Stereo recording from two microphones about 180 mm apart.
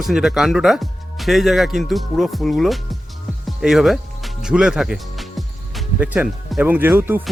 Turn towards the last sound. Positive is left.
turn(degrees=-10)  # may be behind; listen again after turning